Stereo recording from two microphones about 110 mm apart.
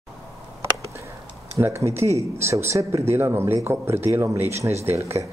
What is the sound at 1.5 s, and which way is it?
A man's voice, 25° right (ahead or behind).